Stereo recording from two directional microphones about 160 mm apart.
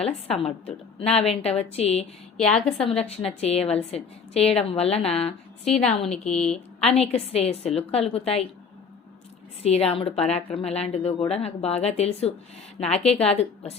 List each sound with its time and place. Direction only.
0.0 s a woman's voice: 40° left (ahead or behind)
2.6 s a woman's voice: 5° left (ahead or behind)
2.8 s a woman's voice: 40° left (ahead or behind)
6.1 s a woman's voice: 5° left (ahead or behind)
6.7 s a woman's voice: 40° left (ahead or behind)
9.6 s a woman's voice: 40° left (ahead or behind)